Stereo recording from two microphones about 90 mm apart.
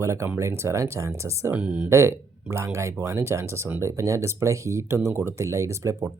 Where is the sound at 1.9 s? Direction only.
30° right (ahead or behind).